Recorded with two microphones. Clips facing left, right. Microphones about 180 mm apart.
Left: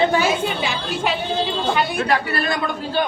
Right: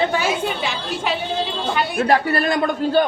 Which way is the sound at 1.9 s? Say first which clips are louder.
Right 3 dB; 45° right (ahead or behind).